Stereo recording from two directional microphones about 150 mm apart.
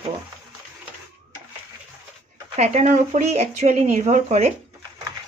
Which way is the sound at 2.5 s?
45° right (ahead or behind).